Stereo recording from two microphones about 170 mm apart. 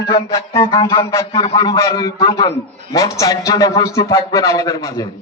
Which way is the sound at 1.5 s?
20° left (ahead or behind).